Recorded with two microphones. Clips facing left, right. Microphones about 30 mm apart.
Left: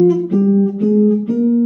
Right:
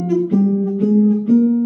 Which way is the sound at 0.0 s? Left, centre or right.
Centre.